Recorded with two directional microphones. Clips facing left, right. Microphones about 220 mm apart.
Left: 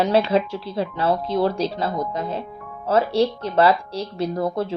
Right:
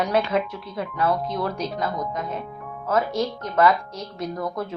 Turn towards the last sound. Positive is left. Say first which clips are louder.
# left 5 dB
turn(degrees=30)  # may be behind; listen again after turning